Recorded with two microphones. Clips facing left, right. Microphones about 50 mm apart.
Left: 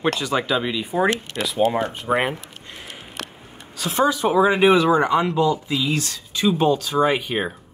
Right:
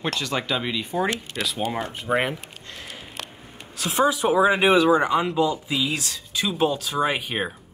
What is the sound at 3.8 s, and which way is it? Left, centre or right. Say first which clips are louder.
Speech: left 1 dB; centre.